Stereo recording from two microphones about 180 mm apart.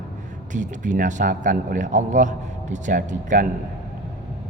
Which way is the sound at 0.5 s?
45° right (ahead or behind).